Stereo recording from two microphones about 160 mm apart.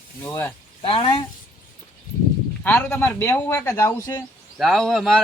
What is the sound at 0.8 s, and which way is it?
Speech, 35° left (ahead or behind).